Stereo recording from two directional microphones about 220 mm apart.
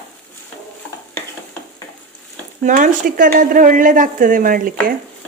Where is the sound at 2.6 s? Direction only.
35° right (ahead or behind).